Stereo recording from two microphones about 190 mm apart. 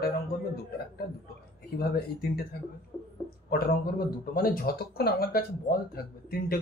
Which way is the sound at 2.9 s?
10° left (ahead or behind).